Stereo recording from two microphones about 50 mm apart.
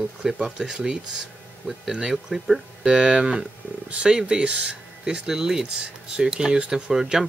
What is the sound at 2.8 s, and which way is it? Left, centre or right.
Speech, centre.